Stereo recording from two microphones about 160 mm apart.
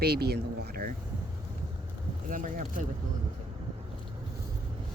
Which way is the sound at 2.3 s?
55° right (ahead or behind).